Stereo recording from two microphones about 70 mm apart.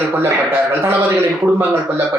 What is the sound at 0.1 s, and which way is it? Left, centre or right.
Speech, right.